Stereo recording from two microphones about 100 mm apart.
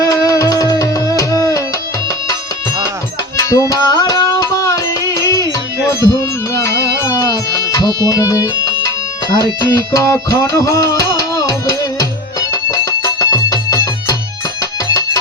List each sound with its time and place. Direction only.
0.0 s music: 35° left (ahead or behind)
3.3 s music: 35° left (ahead or behind)